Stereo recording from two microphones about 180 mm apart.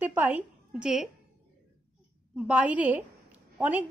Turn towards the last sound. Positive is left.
turn(degrees=-10)  # may be behind; listen again after turning